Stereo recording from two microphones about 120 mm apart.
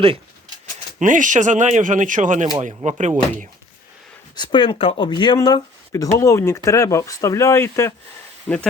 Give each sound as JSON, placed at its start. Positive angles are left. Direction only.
{"t": 0.9, "sound": "speech", "side_deg": -90}
{"t": 4.4, "sound": "speech", "side_deg": 40}
{"t": 5.9, "sound": "speech", "side_deg": 25}
{"t": 8.5, "sound": "speech", "side_deg": 0}